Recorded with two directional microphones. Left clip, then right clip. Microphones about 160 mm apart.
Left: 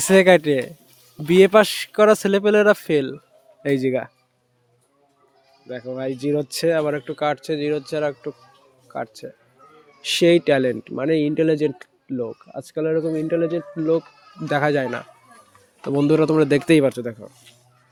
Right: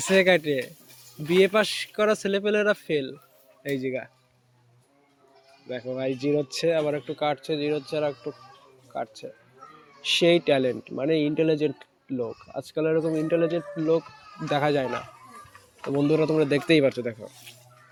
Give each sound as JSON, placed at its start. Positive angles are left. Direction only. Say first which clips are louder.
{"t": 0.0, "sound": "speech", "louder": "left 6 dB", "side_deg": 60}
{"t": 5.6, "sound": "speech", "louder": "left 2 dB", "side_deg": 40}
{"t": 8.9, "sound": "speech", "louder": "left 3 dB", "side_deg": 75}
{"t": 10.0, "sound": "speech", "louder": "left 4 dB", "side_deg": 90}
{"t": 14.4, "sound": "speech", "louder": "left 4 dB", "side_deg": 90}
{"t": 16.8, "sound": "speech", "louder": "left 3 dB", "side_deg": 45}